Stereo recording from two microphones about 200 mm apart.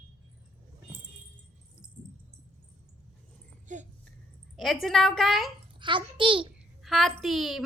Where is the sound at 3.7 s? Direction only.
40° right (ahead or behind).